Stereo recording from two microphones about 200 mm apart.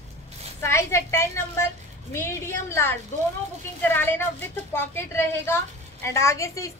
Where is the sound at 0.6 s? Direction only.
15° left (ahead or behind).